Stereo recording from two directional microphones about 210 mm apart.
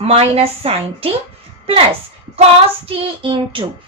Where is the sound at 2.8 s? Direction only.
25° right (ahead or behind).